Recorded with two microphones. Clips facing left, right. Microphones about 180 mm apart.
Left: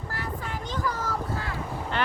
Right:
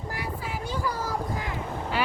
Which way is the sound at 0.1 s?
10° right (ahead or behind).